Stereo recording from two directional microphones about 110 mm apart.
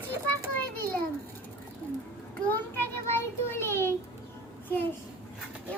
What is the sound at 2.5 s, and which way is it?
Child singing, 20° left (ahead or behind).